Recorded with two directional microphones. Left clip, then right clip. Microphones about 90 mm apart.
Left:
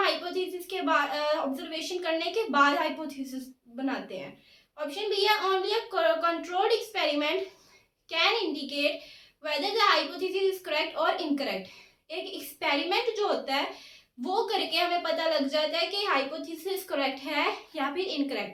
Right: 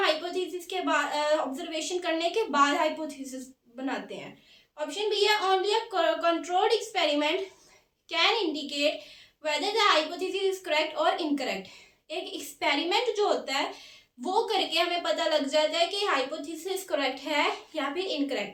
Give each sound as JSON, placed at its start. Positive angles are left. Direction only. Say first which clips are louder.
{"t": 0.0, "sound": "a woman's voice", "louder": "right 1 dB", "side_deg": -40}
{"t": 4.9, "sound": "a child's voice", "louder": "right 1 dB", "side_deg": -40}